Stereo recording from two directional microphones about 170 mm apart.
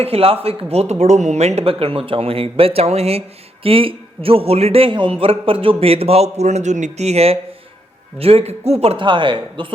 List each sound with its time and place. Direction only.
0.0 s speech: 35° right (ahead or behind)